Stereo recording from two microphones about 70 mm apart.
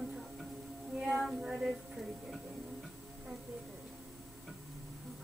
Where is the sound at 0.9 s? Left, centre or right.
Centre.